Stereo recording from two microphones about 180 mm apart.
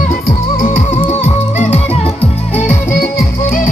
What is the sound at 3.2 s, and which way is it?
Music, 50° left (ahead or behind).